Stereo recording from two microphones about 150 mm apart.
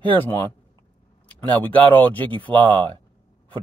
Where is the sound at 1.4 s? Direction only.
10° left (ahead or behind).